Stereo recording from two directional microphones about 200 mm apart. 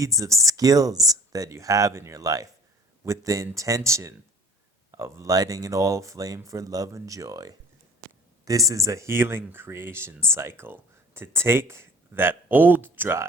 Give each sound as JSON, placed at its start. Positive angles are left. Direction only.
{"t": 0.0, "sound": "speech", "side_deg": -15}